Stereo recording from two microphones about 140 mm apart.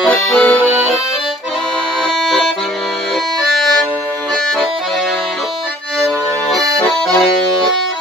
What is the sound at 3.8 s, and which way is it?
Accordion, centre (ahead or behind).